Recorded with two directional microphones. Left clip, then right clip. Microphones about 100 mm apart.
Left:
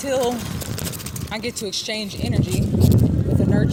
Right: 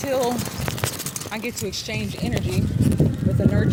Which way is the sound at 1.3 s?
50° left (ahead or behind).